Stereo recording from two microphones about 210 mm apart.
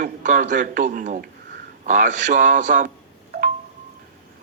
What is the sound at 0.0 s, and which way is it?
A man's voice, 40° right (ahead or behind).